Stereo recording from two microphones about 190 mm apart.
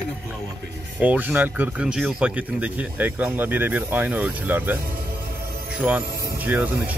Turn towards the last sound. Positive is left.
turn(degrees=-10)  # may be behind; listen again after turning